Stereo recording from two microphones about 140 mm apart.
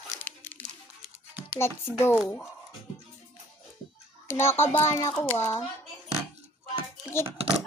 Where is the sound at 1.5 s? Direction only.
20° left (ahead or behind).